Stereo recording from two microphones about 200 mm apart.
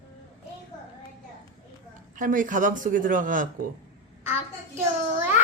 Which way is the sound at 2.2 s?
40° right (ahead or behind).